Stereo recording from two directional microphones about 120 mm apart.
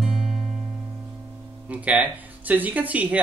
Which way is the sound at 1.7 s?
10° right (ahead or behind).